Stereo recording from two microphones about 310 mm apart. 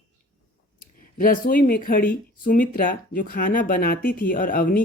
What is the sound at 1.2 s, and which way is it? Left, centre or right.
Speech, left.